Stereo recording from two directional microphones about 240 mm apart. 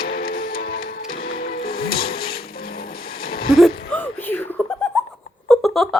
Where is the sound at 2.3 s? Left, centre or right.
Left.